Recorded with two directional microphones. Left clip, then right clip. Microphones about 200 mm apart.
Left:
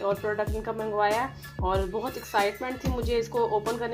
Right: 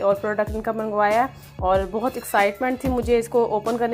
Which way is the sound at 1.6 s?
35° right (ahead or behind).